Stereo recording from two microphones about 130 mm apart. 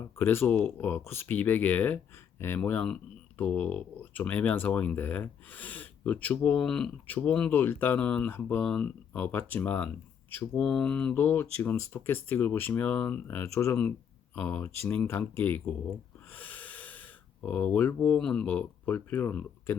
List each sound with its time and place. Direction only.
0.0 s speech: 15° left (ahead or behind)
16.3 s snort: 15° left (ahead or behind)
17.4 s speech: 10° left (ahead or behind)